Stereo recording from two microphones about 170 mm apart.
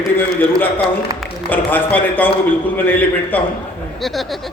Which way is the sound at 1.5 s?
10° left (ahead or behind).